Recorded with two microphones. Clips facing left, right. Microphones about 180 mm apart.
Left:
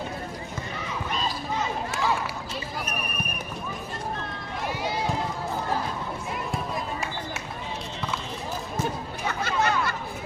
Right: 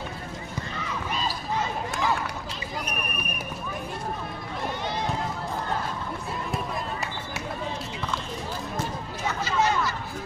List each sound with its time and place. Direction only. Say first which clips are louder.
6.5 s run: right 1 dB; centre (ahead or behind)
9.4 s chatter: right 1 dB; 60° left (ahead or behind)